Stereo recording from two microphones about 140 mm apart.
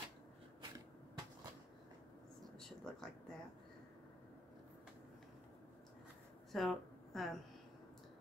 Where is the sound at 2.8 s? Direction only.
5° left (ahead or behind).